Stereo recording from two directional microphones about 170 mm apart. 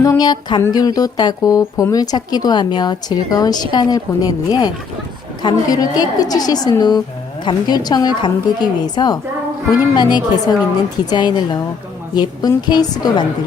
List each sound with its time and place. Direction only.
0.0 s speech: 20° left (ahead or behind)